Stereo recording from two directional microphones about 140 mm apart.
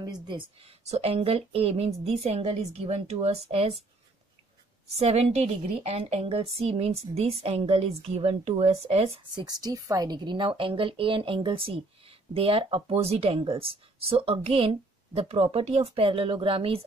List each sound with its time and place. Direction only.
0.0 s a woman's voice: 30° right (ahead or behind)
4.8 s a woman's voice: 45° right (ahead or behind)
9.3 s a woman's voice: 30° right (ahead or behind)